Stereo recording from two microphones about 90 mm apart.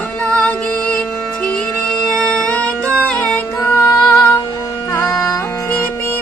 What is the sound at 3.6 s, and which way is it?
Music, 25° left (ahead or behind).